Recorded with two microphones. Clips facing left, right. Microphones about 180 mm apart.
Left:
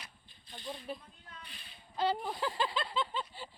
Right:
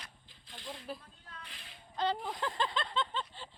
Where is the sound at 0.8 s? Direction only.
Centre (ahead or behind).